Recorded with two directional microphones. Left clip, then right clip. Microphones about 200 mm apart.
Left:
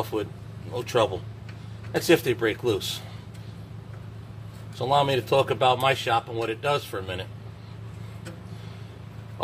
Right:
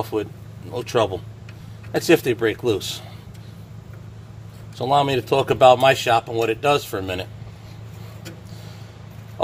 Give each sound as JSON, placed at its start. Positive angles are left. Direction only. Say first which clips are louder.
{"t": 0.0, "sound": "speech", "louder": "right 4 dB", "side_deg": -50}
{"t": 4.7, "sound": "speech", "louder": "right 4 dB", "side_deg": -50}